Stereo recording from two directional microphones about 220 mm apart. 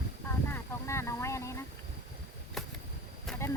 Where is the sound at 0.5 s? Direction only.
10° left (ahead or behind).